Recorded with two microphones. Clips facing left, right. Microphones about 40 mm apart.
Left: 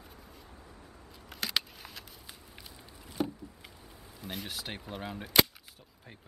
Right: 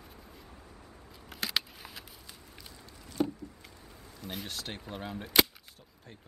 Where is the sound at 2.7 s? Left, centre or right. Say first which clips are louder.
Right 2 dB; centre.